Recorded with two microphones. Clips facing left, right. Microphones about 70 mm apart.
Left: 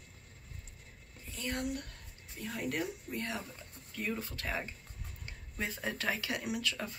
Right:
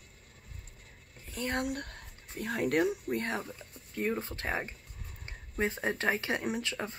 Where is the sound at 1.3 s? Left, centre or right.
Right.